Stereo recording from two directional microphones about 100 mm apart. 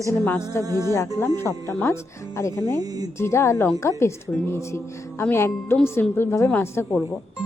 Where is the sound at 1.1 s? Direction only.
25° left (ahead or behind).